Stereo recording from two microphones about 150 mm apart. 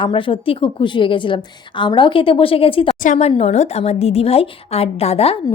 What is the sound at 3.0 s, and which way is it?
Speech, 55° left (ahead or behind).